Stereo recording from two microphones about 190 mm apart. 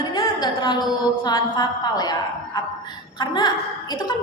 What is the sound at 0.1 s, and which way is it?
Music, 25° left (ahead or behind).